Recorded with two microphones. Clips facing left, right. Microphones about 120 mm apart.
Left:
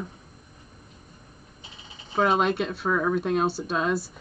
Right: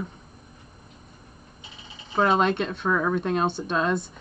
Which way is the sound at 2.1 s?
5° left (ahead or behind).